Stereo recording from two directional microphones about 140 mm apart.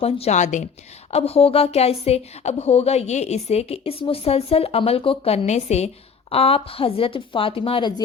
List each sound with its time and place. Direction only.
0.0 s speech: 50° left (ahead or behind)
1.1 s speech: 45° left (ahead or behind)